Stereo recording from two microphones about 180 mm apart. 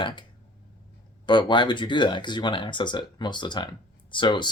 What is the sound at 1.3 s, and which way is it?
Speech, 25° left (ahead or behind).